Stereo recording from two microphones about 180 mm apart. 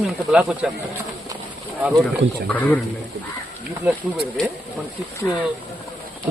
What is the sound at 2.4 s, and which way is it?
Speech, 10° left (ahead or behind).